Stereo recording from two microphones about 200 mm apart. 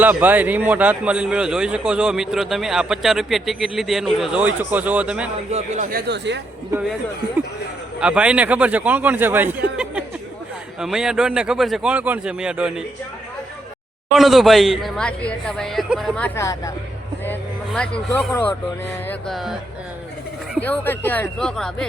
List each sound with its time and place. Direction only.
0.0 s a man's voice: 10° right (ahead or behind)
5.5 s speech: 35° right (ahead or behind)
6.1 s speech: 60° right (ahead or behind)
7.9 s a man's voice: 5° right (ahead or behind)
10.8 s a man's voice: 5° right (ahead or behind)
14.1 s a man's voice: centre (ahead or behind)
20.6 s speech: 10° left (ahead or behind)